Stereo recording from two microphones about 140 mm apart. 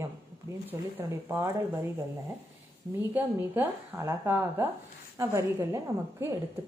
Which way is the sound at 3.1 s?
15° right (ahead or behind).